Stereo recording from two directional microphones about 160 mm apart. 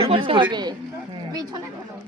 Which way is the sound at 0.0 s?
35° right (ahead or behind).